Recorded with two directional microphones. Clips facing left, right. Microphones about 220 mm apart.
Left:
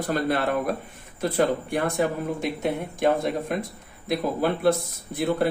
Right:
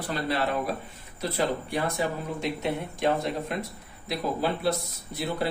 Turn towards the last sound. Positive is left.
turn(degrees=50)  # may be behind; listen again after turning